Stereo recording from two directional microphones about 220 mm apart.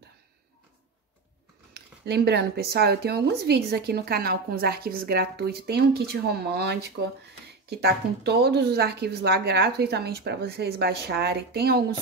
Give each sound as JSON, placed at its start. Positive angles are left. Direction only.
{"t": 1.7, "sound": "speech", "side_deg": -50}